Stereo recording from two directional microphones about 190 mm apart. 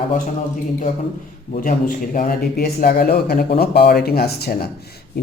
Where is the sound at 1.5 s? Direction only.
45° left (ahead or behind).